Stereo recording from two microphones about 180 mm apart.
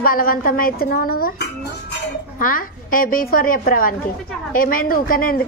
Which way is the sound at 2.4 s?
50° left (ahead or behind).